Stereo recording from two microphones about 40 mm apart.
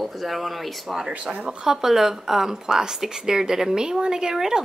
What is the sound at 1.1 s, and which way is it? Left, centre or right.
Speech, right.